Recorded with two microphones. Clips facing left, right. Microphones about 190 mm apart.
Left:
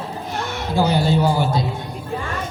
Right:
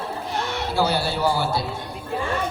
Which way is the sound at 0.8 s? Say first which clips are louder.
Left 5 dB; 15° left (ahead or behind).